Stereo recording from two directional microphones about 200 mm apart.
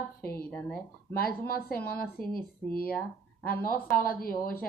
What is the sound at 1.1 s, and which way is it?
Speech, 50° left (ahead or behind).